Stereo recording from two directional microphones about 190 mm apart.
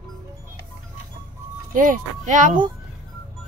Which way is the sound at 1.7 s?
45° right (ahead or behind).